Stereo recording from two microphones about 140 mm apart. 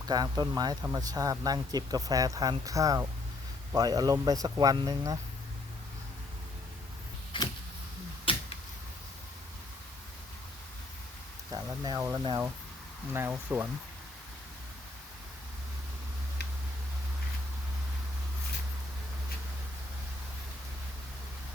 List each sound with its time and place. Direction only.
0.0 s speech: 30° right (ahead or behind)
7.3 s a sound: 35° left (ahead or behind)
11.5 s speech: 30° right (ahead or behind)
13.1 s speech: 15° right (ahead or behind)